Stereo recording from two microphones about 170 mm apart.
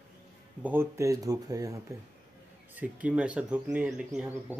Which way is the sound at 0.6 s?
15° right (ahead or behind).